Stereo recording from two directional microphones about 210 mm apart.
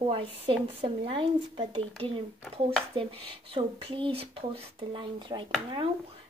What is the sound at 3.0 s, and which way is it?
A woman's voice, 25° right (ahead or behind).